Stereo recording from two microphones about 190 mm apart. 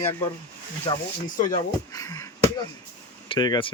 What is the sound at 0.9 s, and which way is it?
Speech, 25° left (ahead or behind).